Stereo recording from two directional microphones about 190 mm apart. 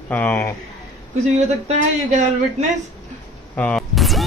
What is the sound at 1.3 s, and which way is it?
Speech, 35° right (ahead or behind).